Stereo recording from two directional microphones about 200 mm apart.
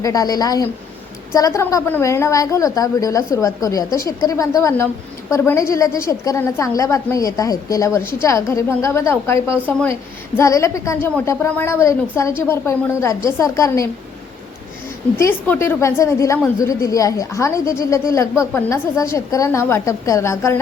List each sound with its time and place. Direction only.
0.0 s a woman's voice: 20° left (ahead or behind)
15.2 s a woman's voice: 10° left (ahead or behind)